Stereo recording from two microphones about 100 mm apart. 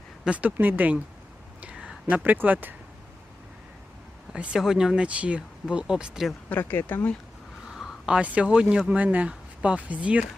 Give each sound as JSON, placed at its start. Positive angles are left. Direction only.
{"t": 0.3, "sound": "speech", "side_deg": -15}
{"t": 1.6, "sound": "a sound", "side_deg": -10}
{"t": 4.3, "sound": "speech", "side_deg": -5}
{"t": 6.5, "sound": "speech", "side_deg": 20}
{"t": 7.7, "sound": "a sound", "side_deg": -5}
{"t": 8.9, "sound": "speech", "side_deg": -15}